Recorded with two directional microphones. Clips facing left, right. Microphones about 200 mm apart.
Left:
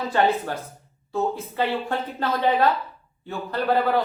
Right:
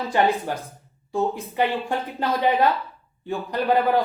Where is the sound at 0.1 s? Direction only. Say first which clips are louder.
Right 1 dB; 15° right (ahead or behind).